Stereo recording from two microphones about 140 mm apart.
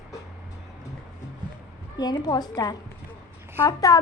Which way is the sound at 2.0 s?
30° left (ahead or behind).